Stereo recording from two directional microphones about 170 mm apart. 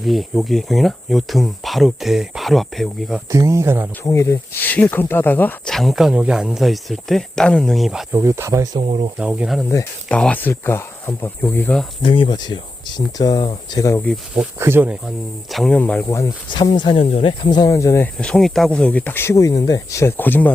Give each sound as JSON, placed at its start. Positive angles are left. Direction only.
{"t": 0.0, "sound": "speech", "side_deg": 0}
{"t": 3.3, "sound": "speech", "side_deg": -15}
{"t": 4.0, "sound": "speech", "side_deg": 20}
{"t": 8.1, "sound": "speech", "side_deg": -15}
{"t": 8.8, "sound": "speech", "side_deg": -40}
{"t": 9.1, "sound": "speech", "side_deg": -5}
{"t": 10.1, "sound": "speech", "side_deg": 5}
{"t": 12.0, "sound": "speech", "side_deg": 30}
{"t": 14.3, "sound": "speech", "side_deg": -10}
{"t": 15.5, "sound": "speech", "side_deg": 5}